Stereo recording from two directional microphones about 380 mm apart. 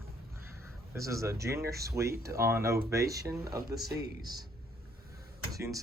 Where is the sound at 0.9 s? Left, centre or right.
Centre.